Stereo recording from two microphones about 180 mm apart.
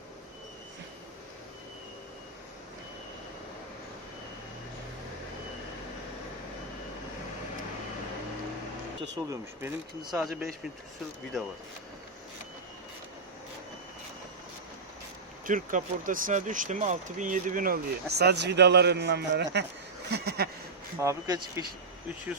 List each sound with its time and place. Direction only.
9.1 s speech: 15° right (ahead or behind)
10.1 s speech: 5° right (ahead or behind)
15.4 s speech: 50° right (ahead or behind); by 19.5 s 70° right (ahead or behind)
20.1 s a sound: 65° right (ahead or behind)
21.0 s speech: 20° right (ahead or behind)